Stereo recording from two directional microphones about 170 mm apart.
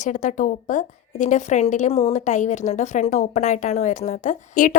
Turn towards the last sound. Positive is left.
turn(degrees=50)  # may be behind; listen again after turning